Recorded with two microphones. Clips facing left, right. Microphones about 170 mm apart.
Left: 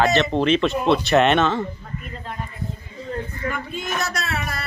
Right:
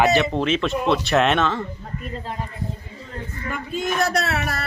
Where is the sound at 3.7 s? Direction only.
60° right (ahead or behind).